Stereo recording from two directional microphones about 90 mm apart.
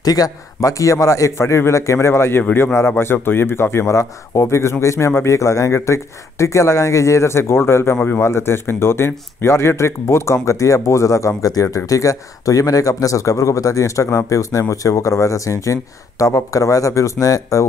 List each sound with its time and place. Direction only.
0.0 s speech: 45° left (ahead or behind)